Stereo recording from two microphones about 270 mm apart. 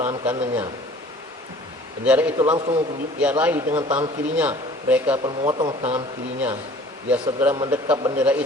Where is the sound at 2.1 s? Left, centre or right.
Centre.